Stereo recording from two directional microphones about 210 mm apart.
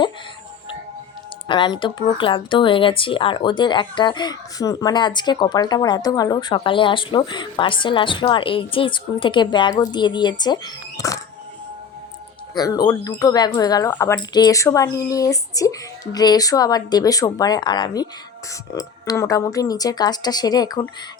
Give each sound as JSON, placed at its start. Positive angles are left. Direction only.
{"t": 1.5, "sound": "speech", "side_deg": 20}
{"t": 12.5, "sound": "speech", "side_deg": 20}